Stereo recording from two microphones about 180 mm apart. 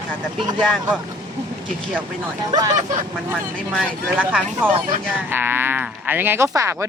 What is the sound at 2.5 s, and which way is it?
Speech, 20° right (ahead or behind).